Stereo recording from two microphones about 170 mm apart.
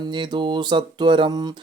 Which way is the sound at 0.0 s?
25° right (ahead or behind).